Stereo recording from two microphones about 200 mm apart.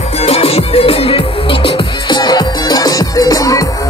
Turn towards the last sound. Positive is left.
turn(degrees=15)  # may be behind; listen again after turning